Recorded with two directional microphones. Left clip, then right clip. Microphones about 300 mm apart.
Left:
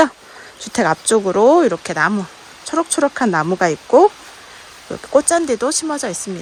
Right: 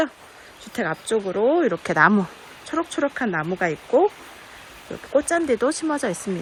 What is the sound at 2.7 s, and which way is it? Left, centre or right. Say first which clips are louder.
Speech: left 7 dB; centre.